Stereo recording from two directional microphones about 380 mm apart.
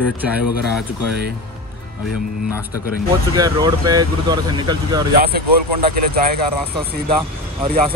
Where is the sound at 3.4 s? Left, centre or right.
Centre.